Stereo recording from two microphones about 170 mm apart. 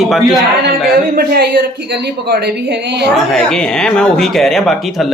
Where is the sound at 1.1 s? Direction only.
65° right (ahead or behind); by 3.1 s 85° right.